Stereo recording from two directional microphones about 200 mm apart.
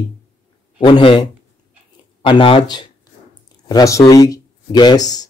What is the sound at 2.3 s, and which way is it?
Speech, 25° left (ahead or behind).